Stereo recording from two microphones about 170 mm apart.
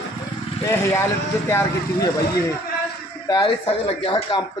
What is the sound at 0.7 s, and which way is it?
Speech, 15° left (ahead or behind).